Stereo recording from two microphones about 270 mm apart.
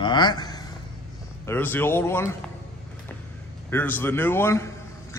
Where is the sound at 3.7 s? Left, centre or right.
Centre.